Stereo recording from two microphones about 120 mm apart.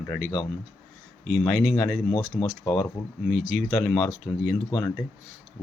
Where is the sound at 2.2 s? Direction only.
45° left (ahead or behind).